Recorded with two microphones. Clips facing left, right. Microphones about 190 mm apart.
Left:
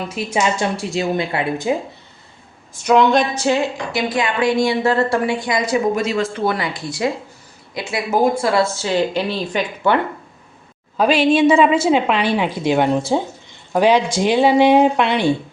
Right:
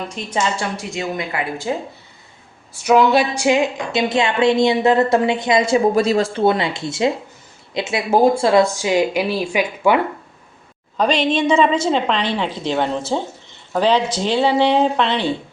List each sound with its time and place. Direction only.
0.1 s a woman's voice: 10° left (ahead or behind)
0.5 s a woman's voice: 20° left (ahead or behind)
1.7 s a woman's voice: 15° left (ahead or behind)
2.8 s a woman's voice: 5° right (ahead or behind)
10.9 s a woman's voice: 5° left (ahead or behind)